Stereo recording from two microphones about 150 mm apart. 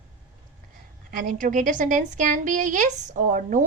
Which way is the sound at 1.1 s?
65° right (ahead or behind).